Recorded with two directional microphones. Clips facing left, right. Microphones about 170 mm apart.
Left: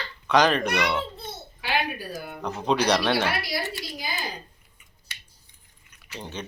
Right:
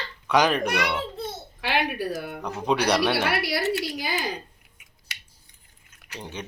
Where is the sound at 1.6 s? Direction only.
70° right (ahead or behind).